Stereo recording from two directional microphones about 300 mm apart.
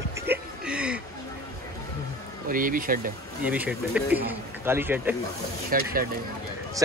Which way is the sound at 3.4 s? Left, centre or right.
Centre.